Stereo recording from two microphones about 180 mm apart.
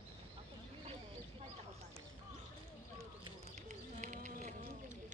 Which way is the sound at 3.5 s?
40° right (ahead or behind).